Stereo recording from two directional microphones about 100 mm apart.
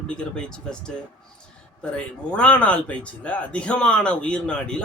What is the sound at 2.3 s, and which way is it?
Speech, 10° left (ahead or behind).